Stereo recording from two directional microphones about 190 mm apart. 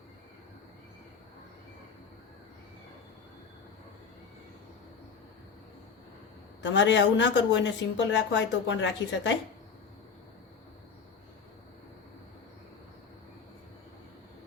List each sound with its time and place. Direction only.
6.6 s a woman's voice: 70° left (ahead or behind)